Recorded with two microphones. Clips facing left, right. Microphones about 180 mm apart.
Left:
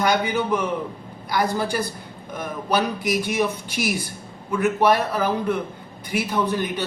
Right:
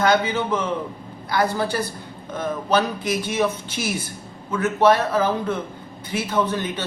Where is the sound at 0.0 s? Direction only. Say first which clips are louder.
Right 2 dB; 15° left (ahead or behind).